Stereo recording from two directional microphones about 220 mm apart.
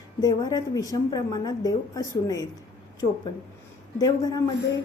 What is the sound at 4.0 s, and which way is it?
Speech, 15° left (ahead or behind).